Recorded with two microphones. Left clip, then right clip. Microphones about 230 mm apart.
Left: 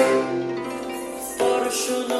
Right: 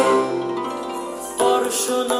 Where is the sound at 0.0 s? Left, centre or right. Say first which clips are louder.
Right 2 dB; right.